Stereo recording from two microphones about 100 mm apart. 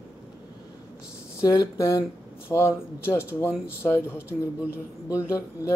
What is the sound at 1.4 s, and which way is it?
Speech, 35° left (ahead or behind).